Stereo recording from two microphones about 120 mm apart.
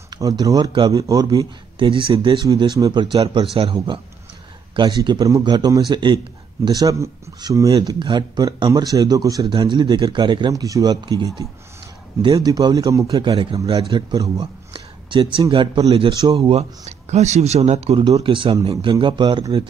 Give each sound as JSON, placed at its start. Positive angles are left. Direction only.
{"t": 0.1, "sound": "a man's voice", "side_deg": -30}
{"t": 1.9, "sound": "a man's voice", "side_deg": -45}
{"t": 9.5, "sound": "a man's voice", "side_deg": -40}
{"t": 12.4, "sound": "a man's voice", "side_deg": -35}
{"t": 13.0, "sound": "a man's voice", "side_deg": -45}
{"t": 18.0, "sound": "a man's voice", "side_deg": -40}